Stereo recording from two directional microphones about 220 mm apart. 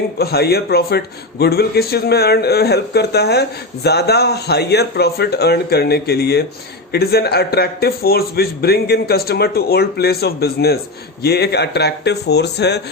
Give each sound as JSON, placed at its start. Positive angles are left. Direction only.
{"t": 0.2, "sound": "a man's voice", "side_deg": 45}